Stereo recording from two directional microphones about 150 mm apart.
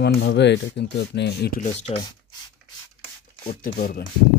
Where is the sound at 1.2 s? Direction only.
90° left.